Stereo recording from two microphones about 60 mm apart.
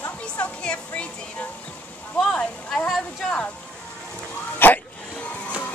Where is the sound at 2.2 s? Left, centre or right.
Centre.